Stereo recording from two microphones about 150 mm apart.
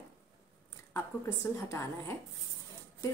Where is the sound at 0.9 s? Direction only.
15° left (ahead or behind).